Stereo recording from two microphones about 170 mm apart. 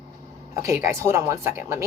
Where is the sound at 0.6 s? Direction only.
15° right (ahead or behind).